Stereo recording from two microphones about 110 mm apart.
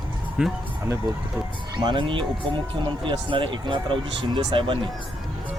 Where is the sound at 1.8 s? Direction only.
45° right (ahead or behind).